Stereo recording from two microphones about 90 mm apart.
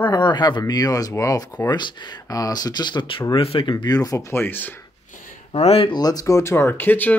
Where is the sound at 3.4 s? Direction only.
85° left.